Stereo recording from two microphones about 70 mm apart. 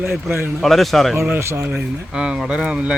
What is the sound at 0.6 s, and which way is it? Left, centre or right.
Speech, centre.